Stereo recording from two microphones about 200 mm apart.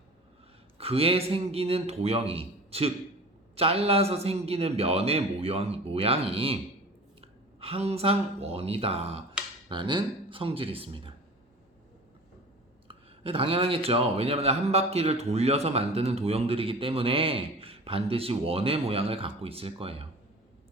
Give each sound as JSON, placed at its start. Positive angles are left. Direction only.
{"t": 0.8, "sound": "speech", "side_deg": -30}
{"t": 12.9, "sound": "speech", "side_deg": -30}